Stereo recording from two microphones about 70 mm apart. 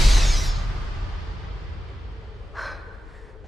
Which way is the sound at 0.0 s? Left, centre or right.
Centre.